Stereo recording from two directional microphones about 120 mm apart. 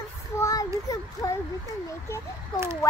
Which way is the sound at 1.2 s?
30° left (ahead or behind).